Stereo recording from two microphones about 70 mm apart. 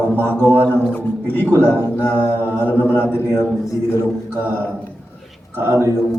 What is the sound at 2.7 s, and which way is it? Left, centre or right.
Speech, left.